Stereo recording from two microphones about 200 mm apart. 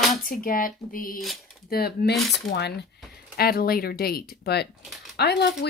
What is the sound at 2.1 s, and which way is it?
Speech, centre (ahead or behind).